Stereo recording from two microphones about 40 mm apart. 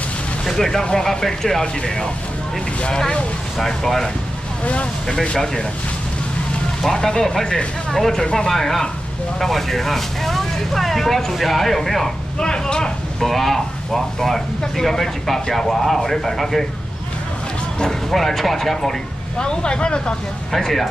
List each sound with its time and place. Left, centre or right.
0.5 s speech: centre
3.5 s speech: centre
6.8 s speech: centre
8.2 s speech: centre
12.4 s speech: left
13.2 s speech: centre
18.1 s speech: centre
19.3 s speech: left
20.5 s speech: centre